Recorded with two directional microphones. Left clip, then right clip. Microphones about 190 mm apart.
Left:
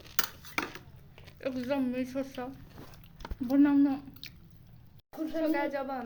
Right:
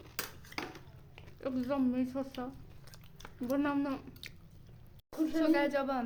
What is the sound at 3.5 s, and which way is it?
Speech, 20° right (ahead or behind).